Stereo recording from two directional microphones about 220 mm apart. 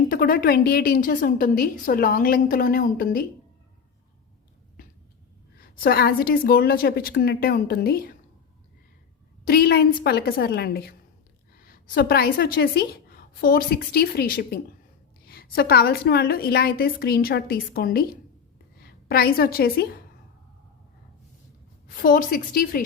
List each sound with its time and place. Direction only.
0.1 s a woman's voice: 40° left (ahead or behind)
5.5 s a woman's voice: 40° left (ahead or behind)
9.4 s a woman's voice: 45° left (ahead or behind)
22.0 s a woman's voice: 40° left (ahead or behind)